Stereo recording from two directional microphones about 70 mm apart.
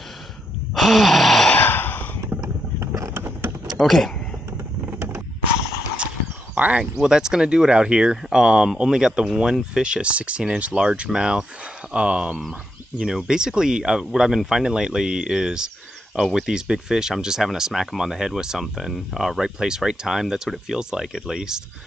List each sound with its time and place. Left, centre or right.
0.7 s gasp: centre
1.6 s sigh: left
2.3 s a sound: right
2.8 s vehicle: right
3.8 s speech: centre
4.9 s a sound: right
6.6 s speech: centre